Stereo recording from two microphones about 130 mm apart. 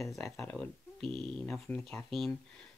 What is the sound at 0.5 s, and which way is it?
Speech, 5° left (ahead or behind).